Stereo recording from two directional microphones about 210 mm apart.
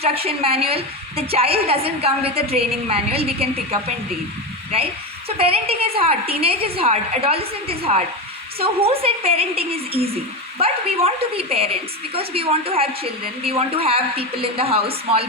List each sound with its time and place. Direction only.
0.0 s a woman's voice: 30° right (ahead or behind)
5.4 s a woman's voice: 25° right (ahead or behind)